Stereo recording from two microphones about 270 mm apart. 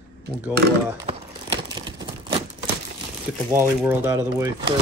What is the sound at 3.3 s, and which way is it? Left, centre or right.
Speech, centre.